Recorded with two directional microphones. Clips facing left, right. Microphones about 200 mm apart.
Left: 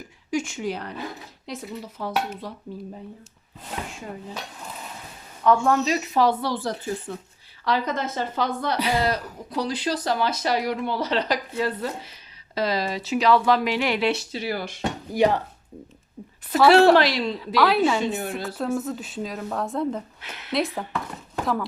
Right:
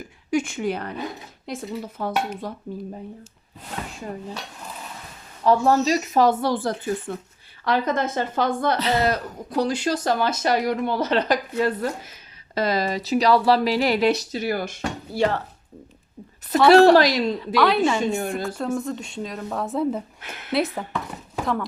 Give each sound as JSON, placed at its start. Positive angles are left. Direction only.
{"t": 0.3, "sound": "speech", "side_deg": -55}
{"t": 5.6, "sound": "speech", "side_deg": -35}
{"t": 8.8, "sound": "speech", "side_deg": 10}
{"t": 9.0, "sound": "speech", "side_deg": -50}
{"t": 14.8, "sound": "dishes", "side_deg": 15}
{"t": 16.9, "sound": "speech", "side_deg": -40}
{"t": 17.4, "sound": "a woman's voice", "side_deg": 5}
{"t": 20.2, "sound": "a woman's voice", "side_deg": -50}
{"t": 20.5, "sound": "speech", "side_deg": 0}